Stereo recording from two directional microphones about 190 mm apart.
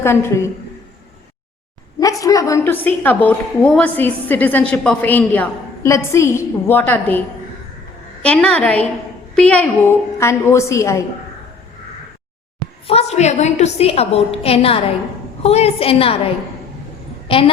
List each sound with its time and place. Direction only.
0.0 s a woman's voice: 15° left (ahead or behind)
2.0 s a woman's voice: 20° left (ahead or behind)
8.2 s a woman's voice: 5° left (ahead or behind)
12.9 s a woman's voice: 35° left (ahead or behind)